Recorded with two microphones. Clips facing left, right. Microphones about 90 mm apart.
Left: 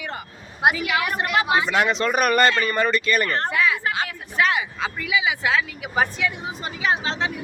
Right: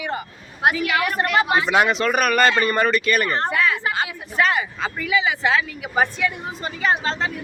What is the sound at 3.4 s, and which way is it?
Speech, centre (ahead or behind).